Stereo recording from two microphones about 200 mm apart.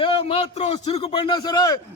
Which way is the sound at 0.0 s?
30° left (ahead or behind).